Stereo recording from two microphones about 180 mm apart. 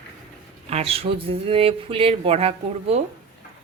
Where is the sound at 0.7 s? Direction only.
35° right (ahead or behind).